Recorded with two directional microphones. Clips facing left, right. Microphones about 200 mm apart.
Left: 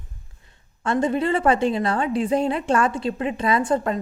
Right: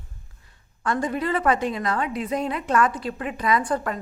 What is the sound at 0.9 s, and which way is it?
A woman's voice, 25° left (ahead or behind).